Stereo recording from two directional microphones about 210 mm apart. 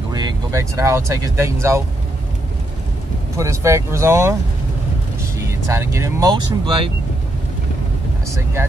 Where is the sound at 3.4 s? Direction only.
15° right (ahead or behind).